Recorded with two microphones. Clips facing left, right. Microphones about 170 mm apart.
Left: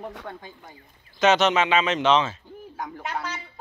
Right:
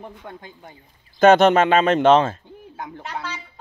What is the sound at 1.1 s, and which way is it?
Speech, 55° right (ahead or behind).